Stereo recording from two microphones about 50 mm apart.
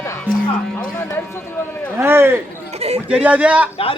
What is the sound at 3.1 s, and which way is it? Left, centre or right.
Speech, right.